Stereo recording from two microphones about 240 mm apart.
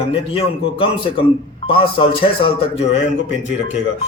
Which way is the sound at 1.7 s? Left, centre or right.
Left.